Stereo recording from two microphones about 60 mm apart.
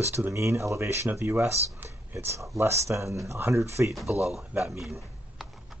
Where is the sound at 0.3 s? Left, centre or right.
Right.